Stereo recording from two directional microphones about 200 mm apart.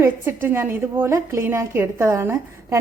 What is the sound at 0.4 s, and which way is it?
A woman's voice, 10° right (ahead or behind).